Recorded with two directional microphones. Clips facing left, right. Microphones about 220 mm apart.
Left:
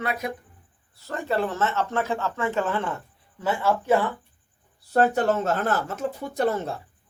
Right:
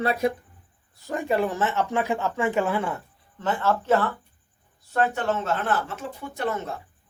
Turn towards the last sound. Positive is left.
turn(degrees=35)  # may be behind; listen again after turning